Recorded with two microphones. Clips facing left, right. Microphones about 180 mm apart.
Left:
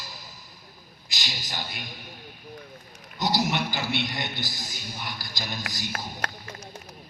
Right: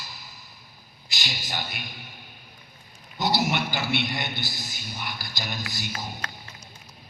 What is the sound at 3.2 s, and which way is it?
A man's voice, 40° left (ahead or behind).